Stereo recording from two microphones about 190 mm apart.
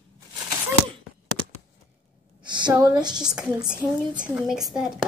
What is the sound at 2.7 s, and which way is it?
Speech, 20° right (ahead or behind).